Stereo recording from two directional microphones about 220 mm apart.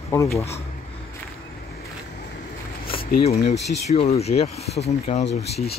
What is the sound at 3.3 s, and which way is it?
Speech, 30° left (ahead or behind).